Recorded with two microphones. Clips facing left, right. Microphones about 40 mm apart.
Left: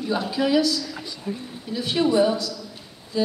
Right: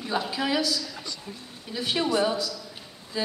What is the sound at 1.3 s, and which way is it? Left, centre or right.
Speech, left.